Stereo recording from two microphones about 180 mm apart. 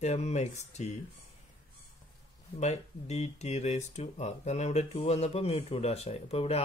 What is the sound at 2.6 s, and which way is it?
Speech, 40° left (ahead or behind).